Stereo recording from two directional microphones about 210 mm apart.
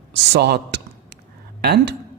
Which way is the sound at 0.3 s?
50° right (ahead or behind).